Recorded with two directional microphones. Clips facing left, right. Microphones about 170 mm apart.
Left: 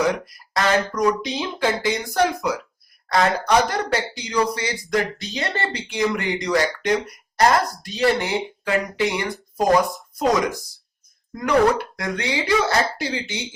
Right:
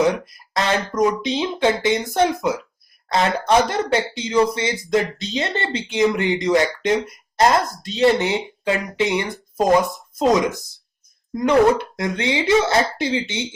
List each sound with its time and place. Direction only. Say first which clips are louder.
0.0 s speech: right 3 dB; 25° right (ahead or behind)